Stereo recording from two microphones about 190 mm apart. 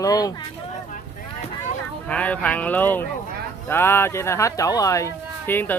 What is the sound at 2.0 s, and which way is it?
Speech, 10° left (ahead or behind).